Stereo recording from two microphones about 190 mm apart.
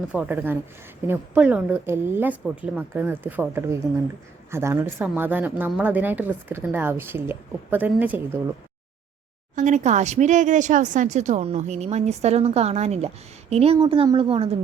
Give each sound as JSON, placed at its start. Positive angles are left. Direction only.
{"t": 0.1, "sound": "speech", "side_deg": -10}
{"t": 9.6, "sound": "a woman's voice", "side_deg": -40}